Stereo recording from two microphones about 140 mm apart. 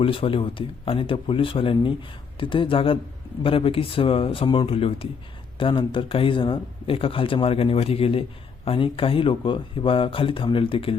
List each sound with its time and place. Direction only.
0.0 s speech: 40° left (ahead or behind)